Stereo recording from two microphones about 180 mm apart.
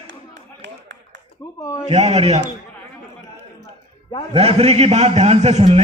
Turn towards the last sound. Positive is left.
turn(degrees=-35)  # may be behind; listen again after turning